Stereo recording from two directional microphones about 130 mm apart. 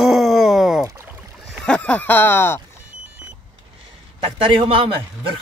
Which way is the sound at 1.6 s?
10° left (ahead or behind).